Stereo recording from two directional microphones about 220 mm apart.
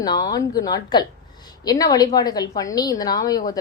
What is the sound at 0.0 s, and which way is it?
A woman's voice, 20° left (ahead or behind).